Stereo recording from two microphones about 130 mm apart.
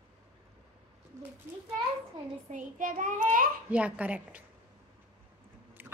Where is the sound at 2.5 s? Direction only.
80° right.